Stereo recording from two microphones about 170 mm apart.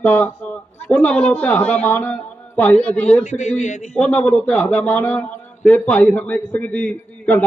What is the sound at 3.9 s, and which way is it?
A man's voice, 5° left (ahead or behind).